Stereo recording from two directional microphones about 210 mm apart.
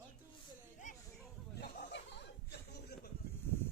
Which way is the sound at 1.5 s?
50° left (ahead or behind).